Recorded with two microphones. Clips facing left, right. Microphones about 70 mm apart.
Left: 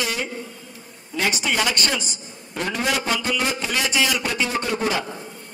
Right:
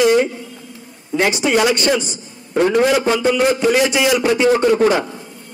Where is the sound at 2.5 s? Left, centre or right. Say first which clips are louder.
Right 12 dB; right.